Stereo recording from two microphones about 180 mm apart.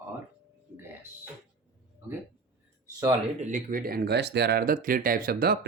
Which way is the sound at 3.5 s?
50° right (ahead or behind).